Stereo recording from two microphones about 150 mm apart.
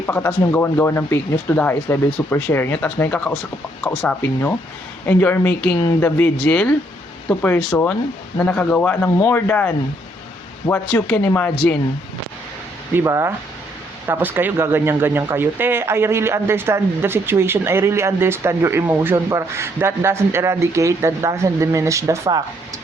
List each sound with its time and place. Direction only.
0.0 s speech: 15° left (ahead or behind)
12.9 s speech: 15° right (ahead or behind)